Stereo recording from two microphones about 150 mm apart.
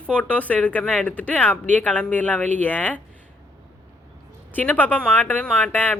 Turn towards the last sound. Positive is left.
turn(degrees=10)  # may be behind; listen again after turning